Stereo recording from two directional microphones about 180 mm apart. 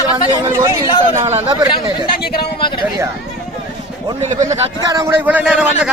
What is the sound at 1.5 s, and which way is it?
Speech, 20° right (ahead or behind).